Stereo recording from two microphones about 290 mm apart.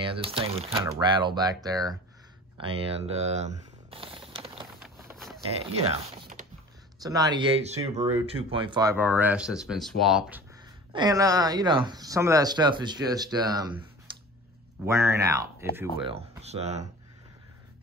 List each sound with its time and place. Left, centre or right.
0.0 s speech: centre
4.8 s vehicle: centre
5.7 s speech: right; by 10.4 s centre
10.9 s speech: centre
14.9 s speech: centre
16.0 s speech: centre